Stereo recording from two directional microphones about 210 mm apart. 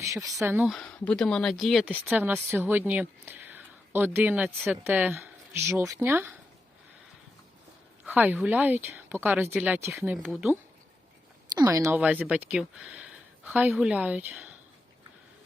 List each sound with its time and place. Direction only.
0.0 s speech: 15° right (ahead or behind)
8.0 s speech: 5° right (ahead or behind)